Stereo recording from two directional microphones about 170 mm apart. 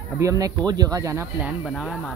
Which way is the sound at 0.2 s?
20° right (ahead or behind).